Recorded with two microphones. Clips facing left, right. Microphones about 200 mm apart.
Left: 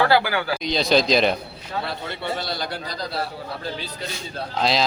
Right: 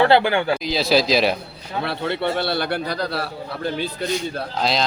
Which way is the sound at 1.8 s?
65° right (ahead or behind).